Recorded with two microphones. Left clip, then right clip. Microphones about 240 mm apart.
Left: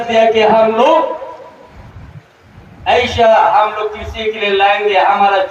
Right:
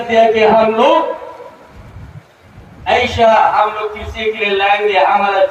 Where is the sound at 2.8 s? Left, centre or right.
Left.